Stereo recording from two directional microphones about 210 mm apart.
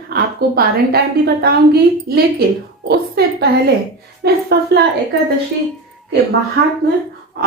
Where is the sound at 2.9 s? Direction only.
50° right (ahead or behind).